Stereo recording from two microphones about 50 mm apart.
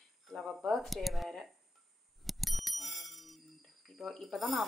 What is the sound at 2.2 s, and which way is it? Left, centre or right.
Bicycle bell, centre.